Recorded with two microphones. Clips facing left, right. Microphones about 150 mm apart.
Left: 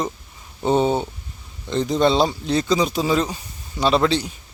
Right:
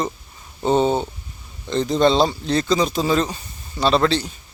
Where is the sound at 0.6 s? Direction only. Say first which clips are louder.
Right 1 dB; 10° left (ahead or behind).